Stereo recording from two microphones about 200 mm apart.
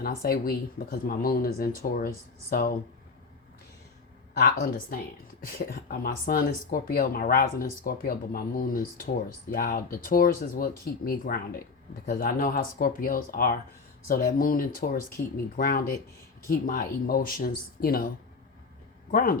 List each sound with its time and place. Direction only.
0.0 s speech: 50° left (ahead or behind)
4.4 s speech: 45° left (ahead or behind)
19.1 s speech: 45° left (ahead or behind)